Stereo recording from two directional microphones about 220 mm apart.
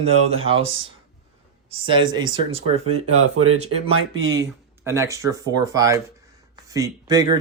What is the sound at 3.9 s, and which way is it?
Speech, 65° right (ahead or behind).